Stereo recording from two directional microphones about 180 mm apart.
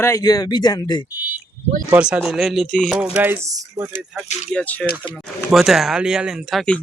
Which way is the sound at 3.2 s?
10° right (ahead or behind).